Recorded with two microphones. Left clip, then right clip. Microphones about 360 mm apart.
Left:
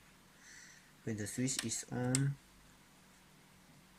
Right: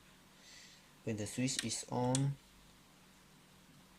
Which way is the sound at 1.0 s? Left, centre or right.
Right.